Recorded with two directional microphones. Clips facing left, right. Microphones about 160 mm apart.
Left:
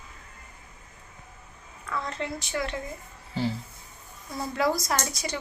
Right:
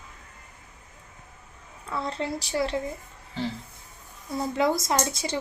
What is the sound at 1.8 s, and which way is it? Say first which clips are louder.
Speech: right 2 dB; 30° right (ahead or behind).